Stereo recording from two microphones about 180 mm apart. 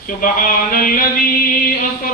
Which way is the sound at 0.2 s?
50° left (ahead or behind).